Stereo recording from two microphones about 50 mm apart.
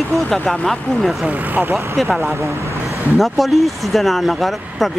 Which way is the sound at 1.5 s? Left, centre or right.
Right.